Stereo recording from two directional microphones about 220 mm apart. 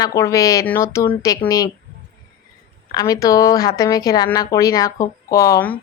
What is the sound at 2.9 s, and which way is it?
A woman's voice, 15° left (ahead or behind).